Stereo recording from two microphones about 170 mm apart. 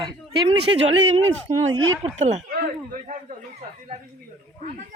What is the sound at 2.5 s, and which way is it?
Speech, 60° right (ahead or behind).